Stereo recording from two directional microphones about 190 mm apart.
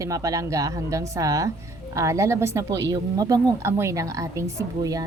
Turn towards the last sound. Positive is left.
turn(degrees=-20)  # may be behind; listen again after turning